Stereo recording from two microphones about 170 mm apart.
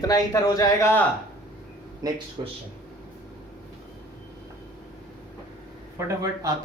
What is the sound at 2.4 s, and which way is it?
Speech, 30° right (ahead or behind).